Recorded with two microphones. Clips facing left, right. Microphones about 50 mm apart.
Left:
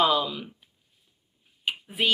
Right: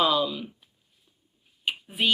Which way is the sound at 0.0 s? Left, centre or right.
Left.